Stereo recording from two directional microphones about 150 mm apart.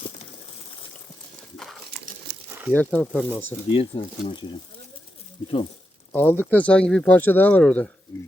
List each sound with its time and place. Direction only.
0.0 s a sound: 50° left (ahead or behind)
2.7 s speech: 10° left (ahead or behind)
3.7 s speech: 35° left (ahead or behind)
6.1 s speech: 15° left (ahead or behind)